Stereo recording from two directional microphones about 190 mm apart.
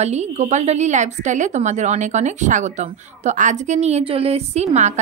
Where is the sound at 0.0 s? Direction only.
35° right (ahead or behind).